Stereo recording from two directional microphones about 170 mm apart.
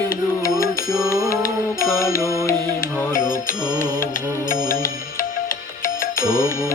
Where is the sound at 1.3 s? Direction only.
55° left (ahead or behind).